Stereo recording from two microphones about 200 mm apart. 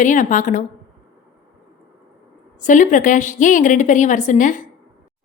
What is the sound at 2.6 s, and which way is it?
A woman's voice, 40° left (ahead or behind).